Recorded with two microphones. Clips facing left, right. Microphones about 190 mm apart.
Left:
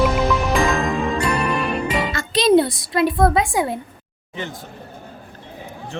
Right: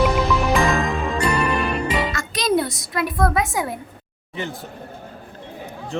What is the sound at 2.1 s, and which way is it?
Music, 25° left (ahead or behind).